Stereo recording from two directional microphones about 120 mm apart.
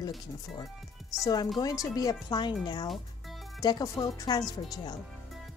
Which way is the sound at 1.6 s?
30° left (ahead or behind).